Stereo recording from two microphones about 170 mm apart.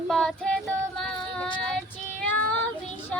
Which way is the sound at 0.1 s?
5° left (ahead or behind).